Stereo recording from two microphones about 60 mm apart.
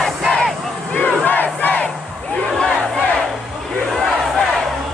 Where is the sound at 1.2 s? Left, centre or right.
Left.